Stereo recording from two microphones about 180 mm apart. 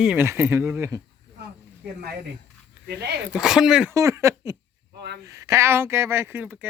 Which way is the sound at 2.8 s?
65° right (ahead or behind).